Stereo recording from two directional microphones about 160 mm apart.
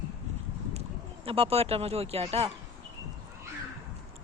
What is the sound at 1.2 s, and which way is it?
A woman's voice, 35° right (ahead or behind).